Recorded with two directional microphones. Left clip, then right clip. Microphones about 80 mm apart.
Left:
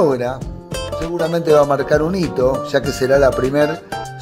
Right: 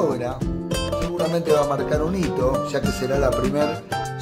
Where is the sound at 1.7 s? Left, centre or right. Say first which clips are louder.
Left 7 dB; left.